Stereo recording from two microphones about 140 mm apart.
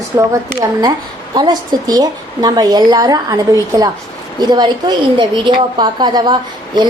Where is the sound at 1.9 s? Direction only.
25° right (ahead or behind).